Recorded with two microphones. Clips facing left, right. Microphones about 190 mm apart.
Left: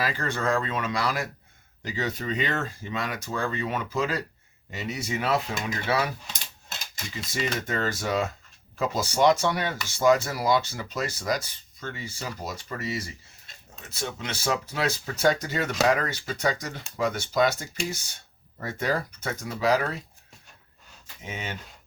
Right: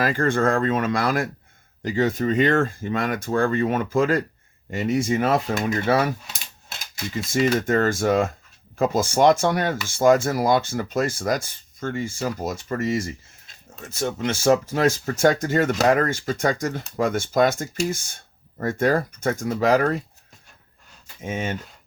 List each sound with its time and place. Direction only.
0.0 s speech: 50° right (ahead or behind)
6.2 s cutlery: 5° right (ahead or behind)
7.1 s speech: 50° right (ahead or behind)
21.2 s speech: 45° right (ahead or behind)